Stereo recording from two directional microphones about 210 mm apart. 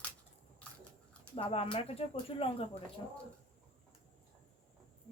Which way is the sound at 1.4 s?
30° left (ahead or behind).